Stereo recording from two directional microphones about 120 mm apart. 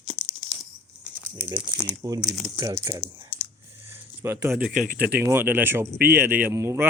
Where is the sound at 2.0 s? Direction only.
25° right (ahead or behind).